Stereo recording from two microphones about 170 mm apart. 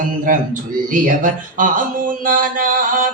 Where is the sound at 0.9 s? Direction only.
50° right (ahead or behind).